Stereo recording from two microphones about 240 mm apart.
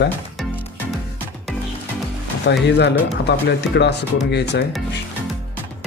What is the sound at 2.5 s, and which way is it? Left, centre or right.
Speech, left.